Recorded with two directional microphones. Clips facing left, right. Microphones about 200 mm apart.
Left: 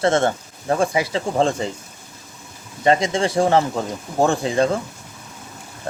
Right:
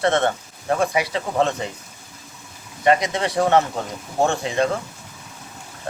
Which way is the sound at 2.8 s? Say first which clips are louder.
Left 1 dB; 30° left (ahead or behind).